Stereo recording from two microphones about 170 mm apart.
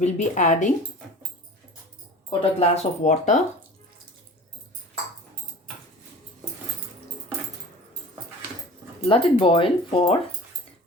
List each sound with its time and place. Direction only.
0.0 s speech: 45° left (ahead or behind)
2.4 s speech: 40° left (ahead or behind)
9.0 s speech: 30° left (ahead or behind)